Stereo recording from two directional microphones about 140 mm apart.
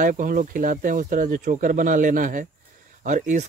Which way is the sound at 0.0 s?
75° right (ahead or behind).